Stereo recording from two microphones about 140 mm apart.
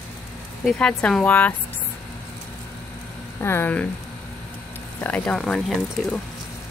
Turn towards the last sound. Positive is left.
turn(degrees=5)  # may be behind; listen again after turning